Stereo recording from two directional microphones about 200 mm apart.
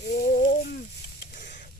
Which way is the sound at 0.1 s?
40° left (ahead or behind).